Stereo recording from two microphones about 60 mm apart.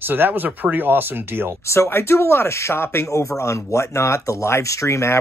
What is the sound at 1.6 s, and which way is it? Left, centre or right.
Speech, left.